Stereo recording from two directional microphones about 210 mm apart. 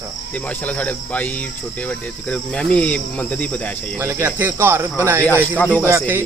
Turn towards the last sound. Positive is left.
turn(degrees=-10)  # may be behind; listen again after turning